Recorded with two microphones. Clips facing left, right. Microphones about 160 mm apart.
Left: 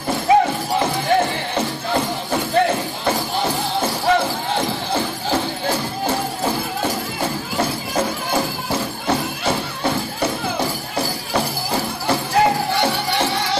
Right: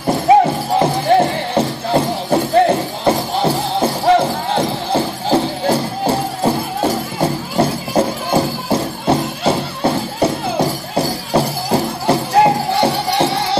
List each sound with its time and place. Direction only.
0.3 s music: 30° right (ahead or behind)